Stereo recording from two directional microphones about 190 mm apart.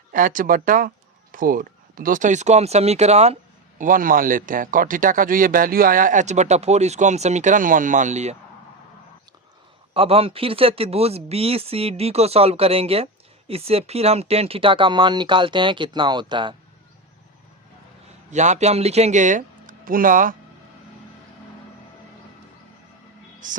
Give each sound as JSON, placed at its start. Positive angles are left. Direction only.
{"t": 0.1, "sound": "a man's voice", "side_deg": -45}
{"t": 3.8, "sound": "a man's voice", "side_deg": -45}
{"t": 9.9, "sound": "speech", "side_deg": -30}
{"t": 18.3, "sound": "speech", "side_deg": -40}
{"t": 23.4, "sound": "a man's voice", "side_deg": -45}